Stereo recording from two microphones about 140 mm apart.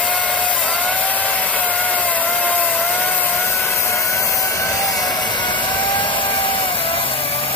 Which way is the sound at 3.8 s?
20° left (ahead or behind).